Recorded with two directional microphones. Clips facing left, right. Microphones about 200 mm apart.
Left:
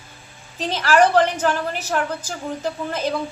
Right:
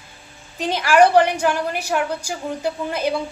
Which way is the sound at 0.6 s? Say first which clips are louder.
Right 2 dB; 10° right (ahead or behind).